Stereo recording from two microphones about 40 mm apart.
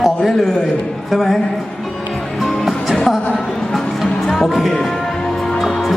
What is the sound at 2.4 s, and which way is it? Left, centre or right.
Music, centre.